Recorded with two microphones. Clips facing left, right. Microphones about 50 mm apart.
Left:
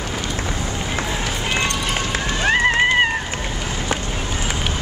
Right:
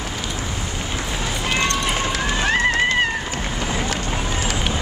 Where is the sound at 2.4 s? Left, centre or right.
Left.